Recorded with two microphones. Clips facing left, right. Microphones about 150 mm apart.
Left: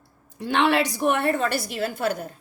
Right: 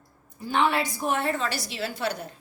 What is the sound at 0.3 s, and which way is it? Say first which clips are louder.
A woman's voice: left 3 dB; 80° left.